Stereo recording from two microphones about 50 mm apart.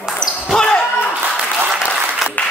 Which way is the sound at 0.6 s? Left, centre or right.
Centre.